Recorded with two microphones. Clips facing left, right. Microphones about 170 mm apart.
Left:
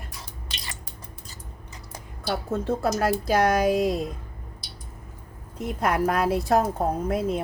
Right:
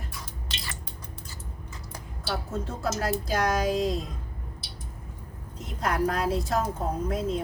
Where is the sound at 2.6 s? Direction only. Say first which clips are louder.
Left 8 dB; 60° left (ahead or behind).